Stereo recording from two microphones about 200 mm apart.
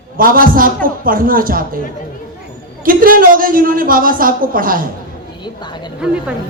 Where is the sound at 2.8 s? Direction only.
45° right (ahead or behind).